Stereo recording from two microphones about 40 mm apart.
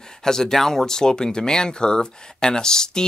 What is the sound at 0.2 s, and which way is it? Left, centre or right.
Speech, centre.